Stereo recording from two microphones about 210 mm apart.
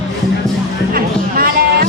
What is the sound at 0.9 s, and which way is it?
Music, 45° right (ahead or behind).